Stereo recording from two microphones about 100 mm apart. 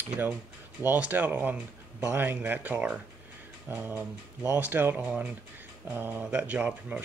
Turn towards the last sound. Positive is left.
turn(degrees=-15)  # may be behind; listen again after turning